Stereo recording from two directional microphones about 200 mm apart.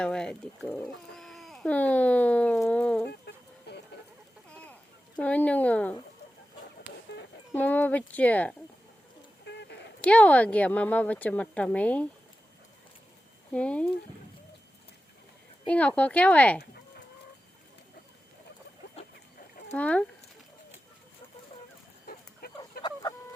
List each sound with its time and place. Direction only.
0.0 s speech: 5° left (ahead or behind)
3.1 s chicken: 55° left (ahead or behind)
4.4 s a sound: 5° left (ahead or behind)
5.2 s a woman's voice: 5° left (ahead or behind)
7.5 s a woman's voice: 10° left (ahead or behind)
9.5 s a sound: 60° left (ahead or behind)
10.0 s a woman's voice: 5° left (ahead or behind)
13.5 s a woman's voice: 5° left (ahead or behind)
15.6 s a woman's voice: 5° left (ahead or behind)
19.7 s a woman's voice: 5° left (ahead or behind)
22.0 s dog: 50° left (ahead or behind)